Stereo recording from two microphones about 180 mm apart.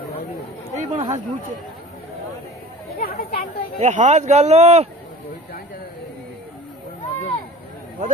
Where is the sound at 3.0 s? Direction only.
55° left (ahead or behind).